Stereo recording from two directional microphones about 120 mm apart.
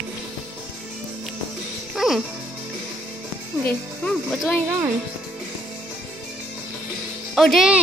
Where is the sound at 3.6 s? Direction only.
15° left (ahead or behind).